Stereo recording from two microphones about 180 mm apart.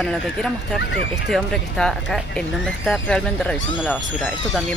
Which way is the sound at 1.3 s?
Centre (ahead or behind).